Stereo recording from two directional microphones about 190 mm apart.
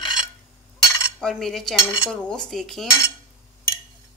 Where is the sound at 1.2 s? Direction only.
Centre (ahead or behind).